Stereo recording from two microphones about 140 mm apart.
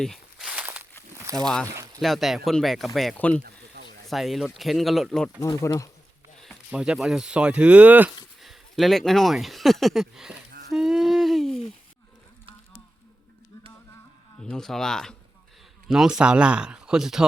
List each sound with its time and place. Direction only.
0.0 s walk: centre (ahead or behind)
1.1 s a sound: 20° right (ahead or behind)
1.6 s speech: 20° right (ahead or behind)
2.0 s speech: centre (ahead or behind)
5.5 s speech: 25° left (ahead or behind)
6.7 s speech: 5° right (ahead or behind)
8.4 s speech: centre (ahead or behind)
10.7 s a sound: 5° right (ahead or behind)
14.5 s speech: 5° left (ahead or behind)